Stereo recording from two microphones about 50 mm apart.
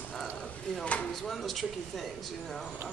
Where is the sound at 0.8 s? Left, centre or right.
Left.